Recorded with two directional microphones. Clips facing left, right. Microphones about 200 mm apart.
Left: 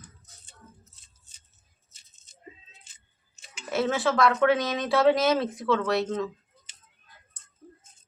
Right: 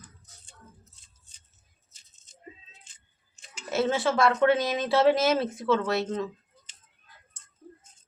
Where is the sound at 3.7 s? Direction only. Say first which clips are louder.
Even; 25° right (ahead or behind).